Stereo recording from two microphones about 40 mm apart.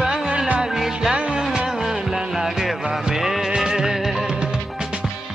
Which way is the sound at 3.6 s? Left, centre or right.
Centre.